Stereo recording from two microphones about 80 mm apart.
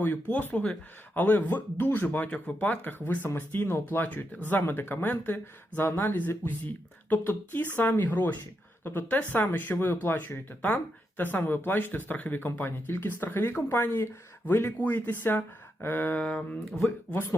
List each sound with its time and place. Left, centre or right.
0.0 s speech: left
16.2 s speech: centre